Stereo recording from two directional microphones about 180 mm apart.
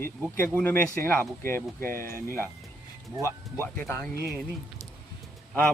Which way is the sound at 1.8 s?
55° right (ahead or behind).